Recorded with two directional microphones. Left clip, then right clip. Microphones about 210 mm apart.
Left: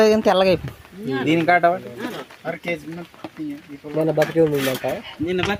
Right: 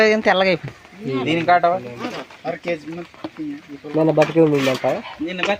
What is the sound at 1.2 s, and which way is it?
Speech, 50° left (ahead or behind).